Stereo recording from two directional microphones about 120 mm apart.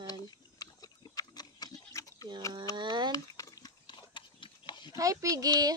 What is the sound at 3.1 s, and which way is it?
Pig, 30° left (ahead or behind).